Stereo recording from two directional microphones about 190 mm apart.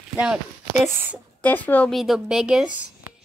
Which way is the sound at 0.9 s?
10° right (ahead or behind).